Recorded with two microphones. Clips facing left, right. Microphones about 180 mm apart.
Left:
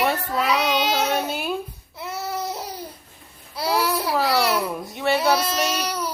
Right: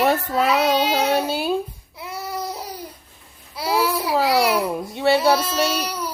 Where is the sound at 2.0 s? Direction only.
10° right (ahead or behind).